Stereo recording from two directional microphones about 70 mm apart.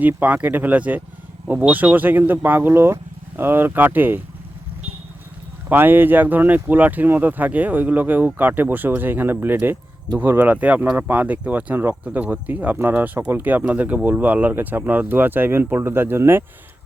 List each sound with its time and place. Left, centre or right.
0.2 s speech: right
5.6 s speech: right